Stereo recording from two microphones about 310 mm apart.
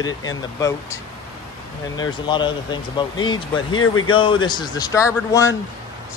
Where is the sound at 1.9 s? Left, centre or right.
Centre.